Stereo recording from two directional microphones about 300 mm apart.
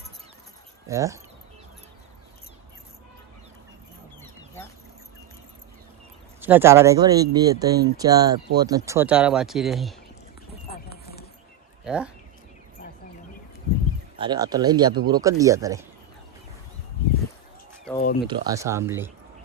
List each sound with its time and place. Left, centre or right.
0.9 s speech: centre
6.4 s speech: centre
10.7 s a sound: left
11.9 s speech: centre
14.2 s speech: centre
17.9 s speech: left
18.3 s speech: centre